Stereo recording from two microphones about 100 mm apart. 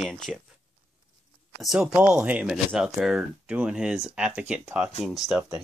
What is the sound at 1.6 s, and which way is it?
Speech, 5° right (ahead or behind).